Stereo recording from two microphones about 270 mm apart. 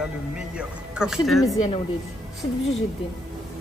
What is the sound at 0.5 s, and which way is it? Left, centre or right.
Speech, centre.